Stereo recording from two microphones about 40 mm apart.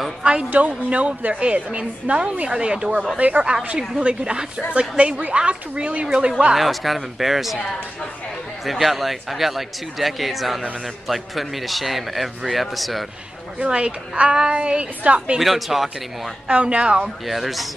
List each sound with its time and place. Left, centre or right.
0.2 s a woman's voice: right
3.2 s a woman's voice: right; by 4.6 s centre
4.7 s a woman's voice: right
5.3 s a woman's voice: right
6.0 s a woman's voice: centre
6.5 s a man's voice: centre
8.6 s a man's voice: centre
13.7 s a woman's voice: right
15.3 s a man's voice: centre
16.4 s a woman's voice: right
17.3 s a man's voice: centre